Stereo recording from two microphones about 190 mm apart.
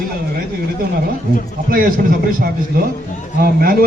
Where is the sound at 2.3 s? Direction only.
50° right (ahead or behind).